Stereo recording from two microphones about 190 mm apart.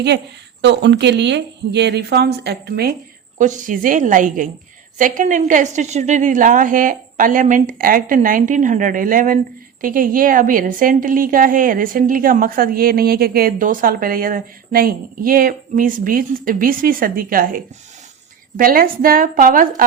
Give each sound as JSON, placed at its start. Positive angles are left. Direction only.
{"t": 0.6, "sound": "speech", "side_deg": -65}
{"t": 3.3, "sound": "a woman's voice", "side_deg": -40}